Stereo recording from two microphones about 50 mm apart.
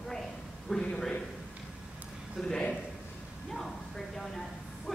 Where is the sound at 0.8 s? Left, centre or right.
Centre.